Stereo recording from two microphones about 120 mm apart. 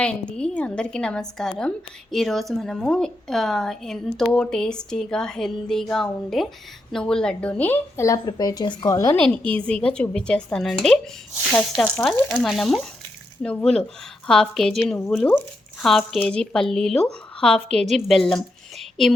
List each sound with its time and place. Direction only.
0.0 s a woman's voice: 10° left (ahead or behind); by 9.1 s 30° left (ahead or behind)
9.1 s a woman's voice: 10° left (ahead or behind)